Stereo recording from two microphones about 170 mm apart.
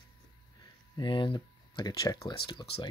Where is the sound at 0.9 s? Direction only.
30° left (ahead or behind).